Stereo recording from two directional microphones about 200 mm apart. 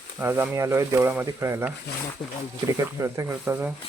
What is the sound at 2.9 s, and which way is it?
Speech, 15° right (ahead or behind).